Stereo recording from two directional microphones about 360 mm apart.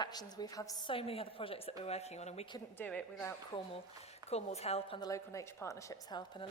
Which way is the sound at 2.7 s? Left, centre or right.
Centre.